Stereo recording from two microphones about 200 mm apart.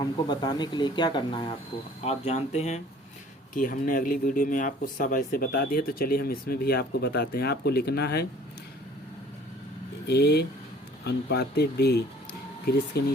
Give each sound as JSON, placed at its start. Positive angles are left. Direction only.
{"t": 0.0, "sound": "speech", "side_deg": 20}
{"t": 10.1, "sound": "speech", "side_deg": 55}